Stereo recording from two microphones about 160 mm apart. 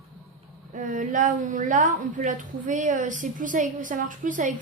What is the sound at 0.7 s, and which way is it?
A woman's voice, 55° right (ahead or behind).